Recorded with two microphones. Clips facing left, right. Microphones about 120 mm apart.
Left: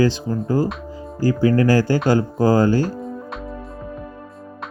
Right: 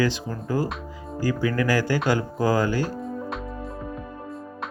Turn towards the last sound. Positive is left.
turn(degrees=0)  # may be behind; listen again after turning